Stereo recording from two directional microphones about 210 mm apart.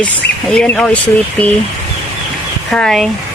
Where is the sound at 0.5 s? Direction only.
5° left (ahead or behind).